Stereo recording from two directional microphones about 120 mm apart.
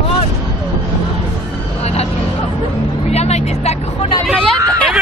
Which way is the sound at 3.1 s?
65° left (ahead or behind).